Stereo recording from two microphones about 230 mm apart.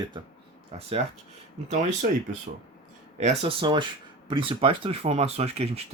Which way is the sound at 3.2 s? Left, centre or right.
Right.